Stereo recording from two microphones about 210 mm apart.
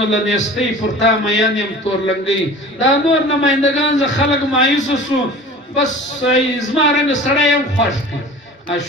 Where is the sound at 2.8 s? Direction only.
60° left (ahead or behind).